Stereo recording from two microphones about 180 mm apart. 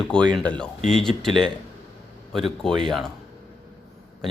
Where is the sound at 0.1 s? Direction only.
5° left (ahead or behind).